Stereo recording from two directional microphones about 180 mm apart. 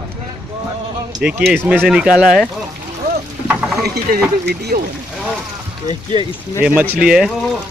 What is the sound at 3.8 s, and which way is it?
Speech, 65° right (ahead or behind).